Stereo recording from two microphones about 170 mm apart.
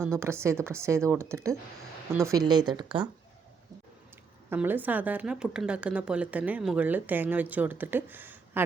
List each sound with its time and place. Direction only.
0.0 s a woman's voice: 15° right (ahead or behind)
4.4 s a woman's voice: 10° right (ahead or behind)